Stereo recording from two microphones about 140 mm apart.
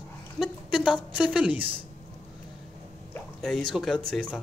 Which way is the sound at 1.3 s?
10° right (ahead or behind).